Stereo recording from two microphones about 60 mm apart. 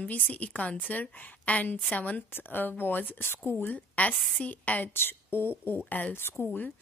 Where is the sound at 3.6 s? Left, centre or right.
Left.